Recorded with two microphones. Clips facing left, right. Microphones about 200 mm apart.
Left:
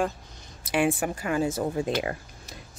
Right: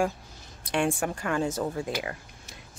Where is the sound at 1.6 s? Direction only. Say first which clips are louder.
Left 3 dB; 20° left (ahead or behind).